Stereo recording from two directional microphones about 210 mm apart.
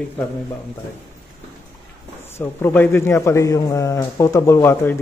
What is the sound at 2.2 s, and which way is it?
A man's voice, 10° left (ahead or behind).